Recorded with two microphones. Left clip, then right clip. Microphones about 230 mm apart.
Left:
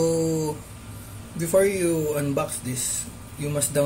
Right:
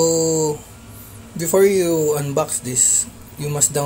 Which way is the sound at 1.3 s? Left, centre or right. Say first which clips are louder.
Right 6 dB; right.